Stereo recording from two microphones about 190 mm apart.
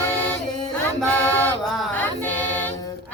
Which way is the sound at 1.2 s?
10° left (ahead or behind).